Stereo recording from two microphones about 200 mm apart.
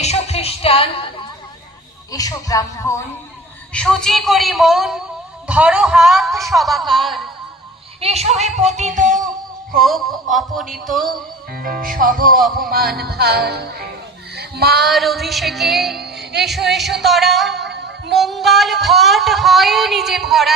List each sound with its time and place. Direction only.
0.0 s music: 30° left (ahead or behind)
2.1 s speech: 15° left (ahead or behind)
3.7 s speech: 5° left (ahead or behind)
8.0 s music: 30° right (ahead or behind)
9.8 s speech: centre (ahead or behind)
11.1 s music: 45° right (ahead or behind)
14.3 s child singing: 55° right (ahead or behind)
14.8 s speech: centre (ahead or behind)
17.7 s music: 60° right (ahead or behind)
18.1 s speech: centre (ahead or behind)